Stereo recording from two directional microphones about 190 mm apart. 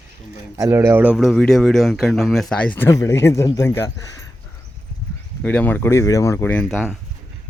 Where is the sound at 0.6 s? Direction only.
15° right (ahead or behind); by 3.9 s 15° left (ahead or behind).